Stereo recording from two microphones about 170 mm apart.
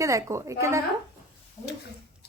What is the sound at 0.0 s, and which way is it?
Speech, 20° right (ahead or behind).